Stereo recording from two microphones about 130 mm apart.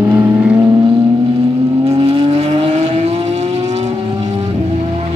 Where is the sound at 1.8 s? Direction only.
45° right (ahead or behind).